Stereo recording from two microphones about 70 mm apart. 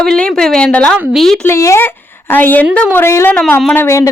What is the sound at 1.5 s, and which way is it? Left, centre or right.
Speech, left.